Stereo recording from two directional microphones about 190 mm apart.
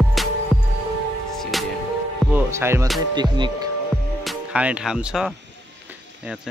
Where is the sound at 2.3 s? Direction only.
10° right (ahead or behind).